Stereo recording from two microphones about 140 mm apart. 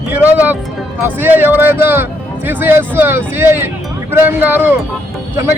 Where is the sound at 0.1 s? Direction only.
10° right (ahead or behind).